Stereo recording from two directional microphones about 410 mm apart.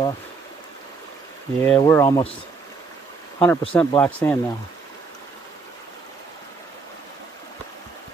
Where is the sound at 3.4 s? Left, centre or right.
Centre.